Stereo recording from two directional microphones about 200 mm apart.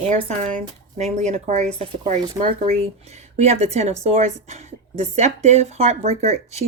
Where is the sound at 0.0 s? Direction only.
35° right (ahead or behind).